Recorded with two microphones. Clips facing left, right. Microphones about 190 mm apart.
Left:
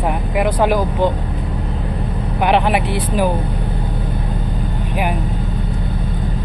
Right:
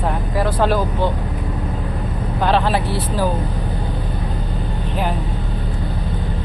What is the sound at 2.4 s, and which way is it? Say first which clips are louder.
Speech: left 2 dB; 15° left (ahead or behind).